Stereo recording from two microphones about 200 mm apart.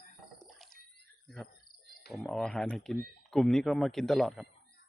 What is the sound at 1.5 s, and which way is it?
Cricket, 45° left (ahead or behind).